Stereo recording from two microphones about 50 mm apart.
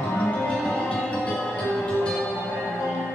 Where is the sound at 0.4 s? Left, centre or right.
Centre.